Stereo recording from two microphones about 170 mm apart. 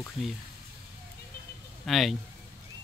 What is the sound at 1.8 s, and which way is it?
Speech, centre (ahead or behind).